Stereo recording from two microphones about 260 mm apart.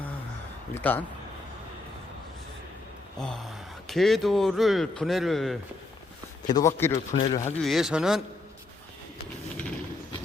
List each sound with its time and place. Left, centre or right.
0.7 s speech: centre
3.2 s speech: centre
6.5 s speech: centre
7.2 s speech: left
7.6 s speech: centre